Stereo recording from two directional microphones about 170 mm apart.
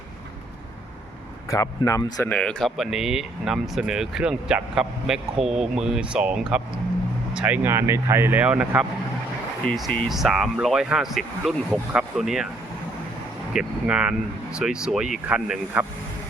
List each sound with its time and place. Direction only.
1.5 s speech: 20° left (ahead or behind)
2.2 s speech: 5° left (ahead or behind)
13.5 s speech: 5° right (ahead or behind)